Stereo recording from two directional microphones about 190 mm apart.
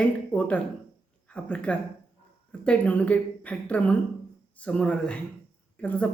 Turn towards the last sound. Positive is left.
turn(degrees=5)  # may be behind; listen again after turning